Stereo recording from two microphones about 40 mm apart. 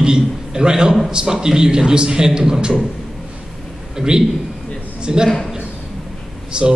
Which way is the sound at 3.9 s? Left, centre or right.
Centre.